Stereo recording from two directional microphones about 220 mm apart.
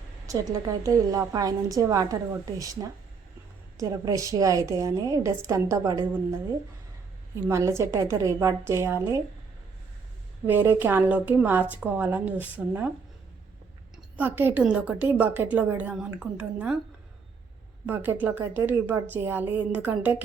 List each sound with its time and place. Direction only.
0.3 s a woman's voice: 15° right (ahead or behind)
7.4 s a woman's voice: 10° right (ahead or behind)
10.4 s a woman's voice: 10° right (ahead or behind)
13.9 s a woman's voice: 10° right (ahead or behind)
17.8 s a woman's voice: 10° right (ahead or behind)